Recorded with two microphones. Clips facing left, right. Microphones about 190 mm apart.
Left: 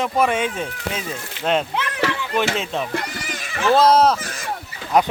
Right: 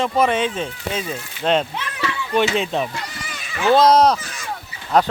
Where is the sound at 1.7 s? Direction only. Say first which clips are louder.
Left 4 dB; 70° left (ahead or behind).